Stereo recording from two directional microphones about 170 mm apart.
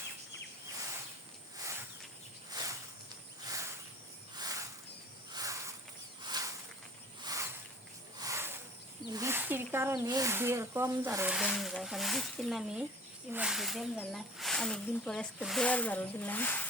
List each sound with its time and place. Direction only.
2.5 s a sound: 20° right (ahead or behind)
9.1 s snake: 15° right (ahead or behind)
10.1 s speech: 20° right (ahead or behind)
11.3 s speech: centre (ahead or behind)